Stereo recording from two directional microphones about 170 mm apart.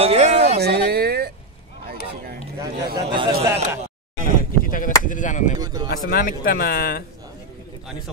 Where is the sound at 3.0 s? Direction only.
30° right (ahead or behind).